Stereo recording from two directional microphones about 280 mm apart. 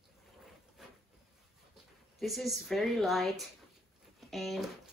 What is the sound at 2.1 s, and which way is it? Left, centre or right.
A woman's voice, centre.